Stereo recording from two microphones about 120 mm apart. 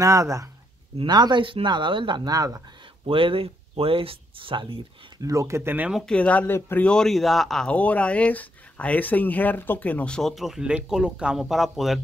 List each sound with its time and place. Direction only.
0.0 s speech: 25° right (ahead or behind)
0.9 s speech: 40° right (ahead or behind)
3.1 s speech: 50° right (ahead or behind)
5.2 s speech: 25° right (ahead or behind)
5.9 s speech: centre (ahead or behind)
6.1 s speech: 10° left (ahead or behind)